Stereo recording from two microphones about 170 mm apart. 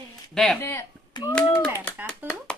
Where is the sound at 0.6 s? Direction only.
15° left (ahead or behind).